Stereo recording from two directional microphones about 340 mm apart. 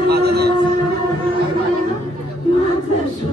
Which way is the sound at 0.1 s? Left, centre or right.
Right.